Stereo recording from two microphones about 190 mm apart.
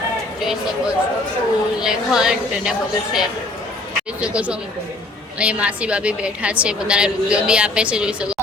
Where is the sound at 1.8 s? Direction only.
5° right (ahead or behind).